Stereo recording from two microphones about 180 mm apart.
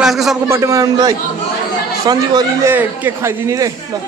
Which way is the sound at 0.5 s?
15° right (ahead or behind).